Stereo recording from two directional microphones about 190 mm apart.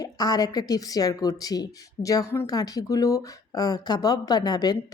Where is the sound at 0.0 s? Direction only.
20° left (ahead or behind).